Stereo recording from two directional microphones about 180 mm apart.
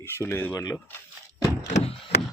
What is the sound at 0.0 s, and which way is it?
Speech, 10° left (ahead or behind).